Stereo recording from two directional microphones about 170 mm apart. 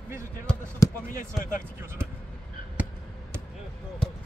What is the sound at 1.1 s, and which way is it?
Speech, 50° left (ahead or behind).